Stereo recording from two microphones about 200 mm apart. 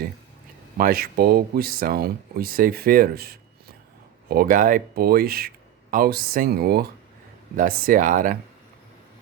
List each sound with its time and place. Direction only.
0.8 s speech: 50° right (ahead or behind)